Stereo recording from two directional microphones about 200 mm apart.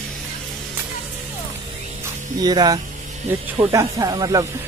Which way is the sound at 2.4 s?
20° right (ahead or behind).